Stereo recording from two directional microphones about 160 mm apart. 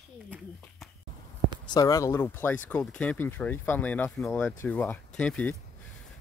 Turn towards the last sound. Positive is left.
turn(degrees=10)  # may be behind; listen again after turning